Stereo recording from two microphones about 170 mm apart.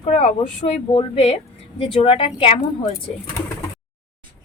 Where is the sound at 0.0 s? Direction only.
35° left (ahead or behind).